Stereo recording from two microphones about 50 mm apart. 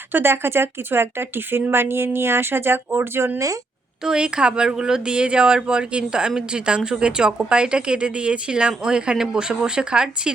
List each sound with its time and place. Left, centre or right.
0.1 s speech: right
3.3 s speech: right
4.0 s speech: centre